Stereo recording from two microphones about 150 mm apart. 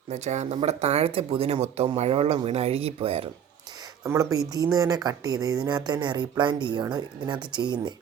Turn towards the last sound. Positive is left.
turn(degrees=-30)  # may be behind; listen again after turning